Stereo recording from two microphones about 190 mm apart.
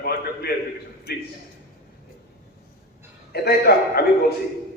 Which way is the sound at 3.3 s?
55° left (ahead or behind).